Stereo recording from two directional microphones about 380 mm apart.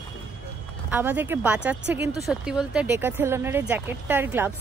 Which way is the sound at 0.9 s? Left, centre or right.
Centre.